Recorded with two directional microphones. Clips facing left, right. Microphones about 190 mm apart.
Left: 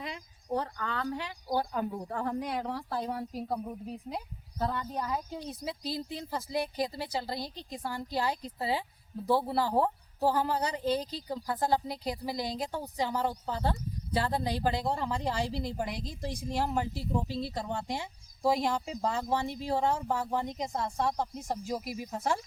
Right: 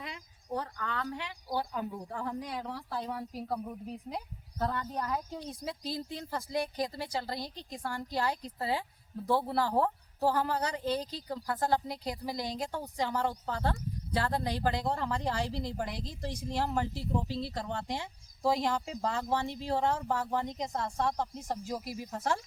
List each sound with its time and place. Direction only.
0.0 s speech: 30° left (ahead or behind)
3.3 s speech: 20° left (ahead or behind)
4.1 s a woman's voice: 10° left (ahead or behind)